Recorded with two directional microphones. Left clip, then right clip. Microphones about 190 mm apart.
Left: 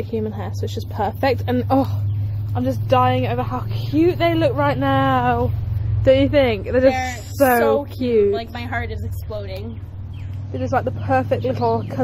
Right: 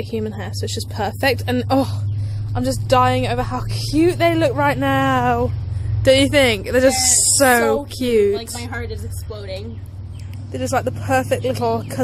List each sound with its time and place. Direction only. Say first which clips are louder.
0.0 s speech: even; centre (ahead or behind)
2.5 s a woman's voice: right 1 dB; 15° right (ahead or behind)
8.4 s a woman's voice: left 2 dB; 15° left (ahead or behind)
10.5 s speech: right 1 dB; 10° right (ahead or behind)